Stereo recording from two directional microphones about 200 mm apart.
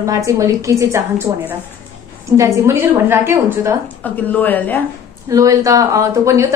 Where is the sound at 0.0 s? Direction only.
15° right (ahead or behind).